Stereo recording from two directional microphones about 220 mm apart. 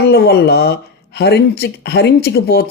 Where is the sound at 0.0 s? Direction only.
45° left (ahead or behind).